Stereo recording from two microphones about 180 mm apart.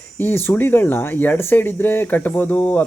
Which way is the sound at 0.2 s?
10° left (ahead or behind).